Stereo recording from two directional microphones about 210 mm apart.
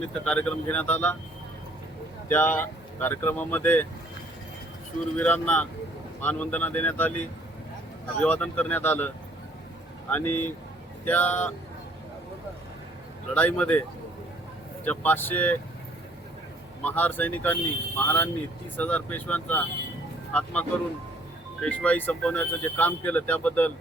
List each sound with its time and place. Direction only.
0.1 s speech: 5° left (ahead or behind)
2.3 s speech: 10° left (ahead or behind)
5.1 s speech: 5° left (ahead or behind)
10.1 s speech: 10° left (ahead or behind)
13.3 s speech: 5° left (ahead or behind)
14.8 s speech: 10° left (ahead or behind)
16.8 s speech: 10° left (ahead or behind)